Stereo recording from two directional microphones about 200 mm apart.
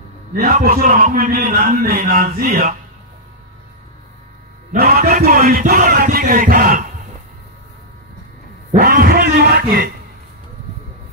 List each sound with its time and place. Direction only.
0.4 s a man's voice: 45° right (ahead or behind)
4.7 s a man's voice: 50° right (ahead or behind)
8.7 s a man's voice: 45° right (ahead or behind)